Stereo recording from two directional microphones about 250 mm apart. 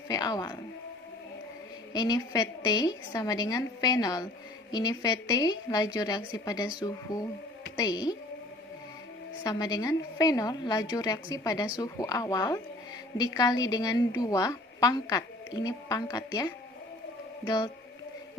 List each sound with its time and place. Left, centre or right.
0.1 s a woman's voice: centre
1.9 s a woman's voice: centre
9.4 s a woman's voice: centre